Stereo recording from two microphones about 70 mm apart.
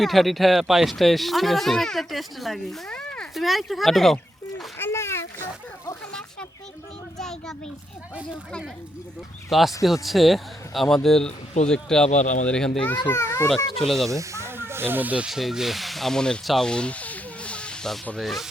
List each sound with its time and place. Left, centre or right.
0.0 s speech: centre
2.9 s a sound: centre
3.3 s speech: centre
4.8 s a sound: left
7.2 s a sound: centre
9.5 s a child's voice: centre
13.1 s a child's voice: left
13.7 s speech: centre
14.1 s speech: right
15.3 s speech: centre
16.6 s a sound: centre
18.2 s speech: centre